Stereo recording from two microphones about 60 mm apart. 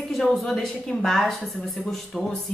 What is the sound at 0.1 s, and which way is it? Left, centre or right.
A woman's voice, centre.